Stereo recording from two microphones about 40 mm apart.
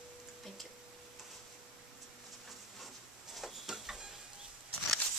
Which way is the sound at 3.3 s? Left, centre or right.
Centre.